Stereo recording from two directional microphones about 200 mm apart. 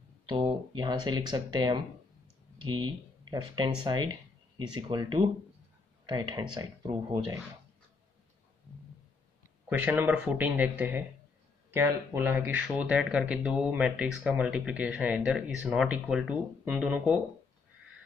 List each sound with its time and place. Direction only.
0.3 s speech: 25° right (ahead or behind)
9.7 s speech: 10° right (ahead or behind)